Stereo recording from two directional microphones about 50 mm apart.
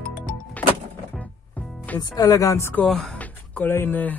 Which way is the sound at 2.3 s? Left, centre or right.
Left.